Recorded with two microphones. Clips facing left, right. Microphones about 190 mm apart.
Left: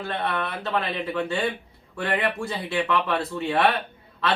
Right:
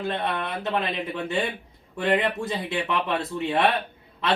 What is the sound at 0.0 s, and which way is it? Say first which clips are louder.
Speech: even; 20° right (ahead or behind).